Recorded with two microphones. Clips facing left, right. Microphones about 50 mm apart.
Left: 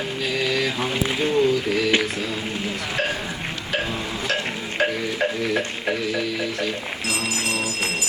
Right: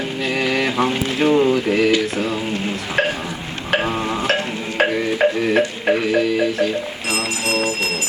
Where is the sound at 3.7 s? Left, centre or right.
Right.